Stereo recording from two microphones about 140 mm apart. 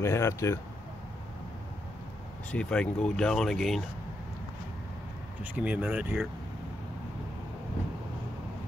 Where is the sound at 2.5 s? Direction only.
5° left (ahead or behind).